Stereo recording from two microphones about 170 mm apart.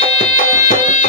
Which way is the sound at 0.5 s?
45° left (ahead or behind).